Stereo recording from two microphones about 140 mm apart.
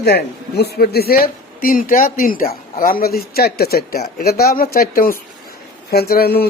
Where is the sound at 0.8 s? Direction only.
90° left.